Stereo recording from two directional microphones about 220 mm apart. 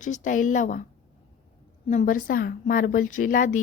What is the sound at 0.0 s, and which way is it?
Speech, 35° left (ahead or behind).